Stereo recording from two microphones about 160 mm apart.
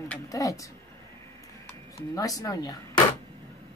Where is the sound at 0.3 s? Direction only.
20° left (ahead or behind).